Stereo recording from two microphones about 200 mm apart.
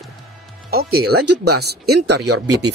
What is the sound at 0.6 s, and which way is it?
Speech, 50° right (ahead or behind).